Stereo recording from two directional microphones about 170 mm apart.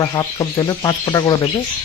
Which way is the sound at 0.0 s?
25° left (ahead or behind).